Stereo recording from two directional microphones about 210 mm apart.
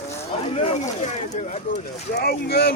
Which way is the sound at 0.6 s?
30° left (ahead or behind).